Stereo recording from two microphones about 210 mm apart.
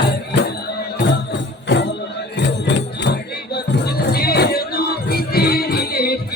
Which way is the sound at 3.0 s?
55° left (ahead or behind).